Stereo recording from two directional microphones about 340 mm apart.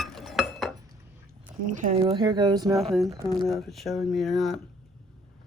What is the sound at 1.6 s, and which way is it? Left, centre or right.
Speech, right.